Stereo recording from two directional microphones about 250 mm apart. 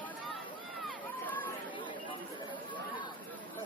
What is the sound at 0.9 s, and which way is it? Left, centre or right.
Run, centre.